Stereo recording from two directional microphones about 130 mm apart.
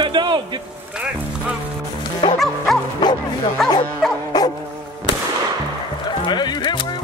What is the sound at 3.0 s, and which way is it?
Speech, 35° left (ahead or behind).